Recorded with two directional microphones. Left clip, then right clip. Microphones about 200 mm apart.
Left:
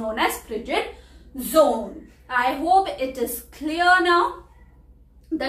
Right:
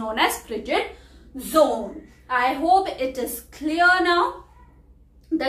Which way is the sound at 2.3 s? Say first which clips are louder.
Even; 5° right (ahead or behind).